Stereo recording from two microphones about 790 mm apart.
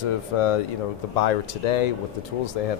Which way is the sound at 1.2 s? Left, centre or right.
Left.